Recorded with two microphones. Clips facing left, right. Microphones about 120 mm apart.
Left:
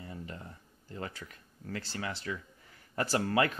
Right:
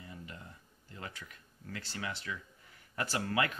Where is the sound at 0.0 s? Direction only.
35° left (ahead or behind).